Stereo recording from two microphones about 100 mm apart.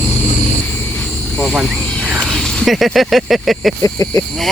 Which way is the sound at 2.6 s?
Centre (ahead or behind).